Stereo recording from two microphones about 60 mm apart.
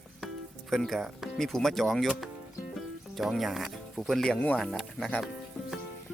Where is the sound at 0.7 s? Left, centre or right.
Centre.